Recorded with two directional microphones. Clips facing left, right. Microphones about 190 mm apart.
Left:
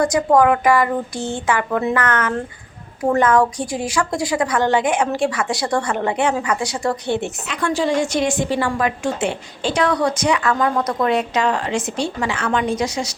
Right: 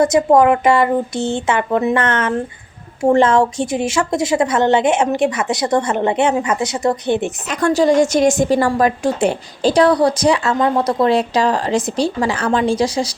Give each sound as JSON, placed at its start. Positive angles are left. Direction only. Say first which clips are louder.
{"t": 0.0, "sound": "a woman's voice", "louder": "right 3 dB", "side_deg": -20}
{"t": 7.4, "sound": "a woman's voice", "louder": "right 8 dB", "side_deg": -40}